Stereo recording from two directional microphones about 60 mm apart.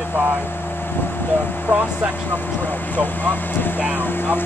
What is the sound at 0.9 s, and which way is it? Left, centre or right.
Speech, left.